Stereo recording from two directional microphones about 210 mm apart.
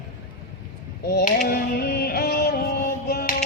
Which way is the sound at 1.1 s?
50° left (ahead or behind).